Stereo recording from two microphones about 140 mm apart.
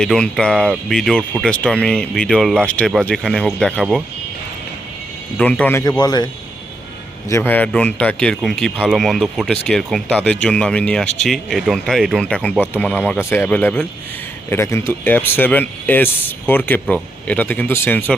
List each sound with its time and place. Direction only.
0.0 s speech: 5° left (ahead or behind)
5.4 s speech: 10° left (ahead or behind)
6.0 s a man's voice: 30° left (ahead or behind)
7.3 s speech: 15° left (ahead or behind)